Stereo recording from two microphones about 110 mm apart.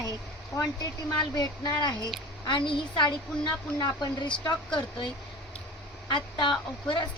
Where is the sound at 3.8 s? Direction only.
40° left (ahead or behind).